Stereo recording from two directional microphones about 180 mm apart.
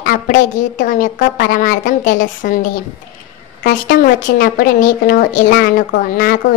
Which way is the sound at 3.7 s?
50° left (ahead or behind).